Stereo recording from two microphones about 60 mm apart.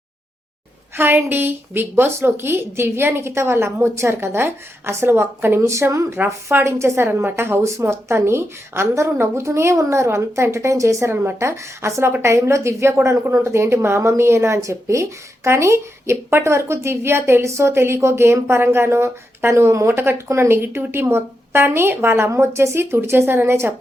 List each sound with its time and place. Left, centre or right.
0.9 s a woman's voice: right
5.5 s a woman's voice: right
7.1 s a woman's voice: right
22.3 s a woman's voice: right